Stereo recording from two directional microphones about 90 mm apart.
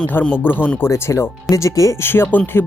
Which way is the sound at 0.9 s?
30° left (ahead or behind).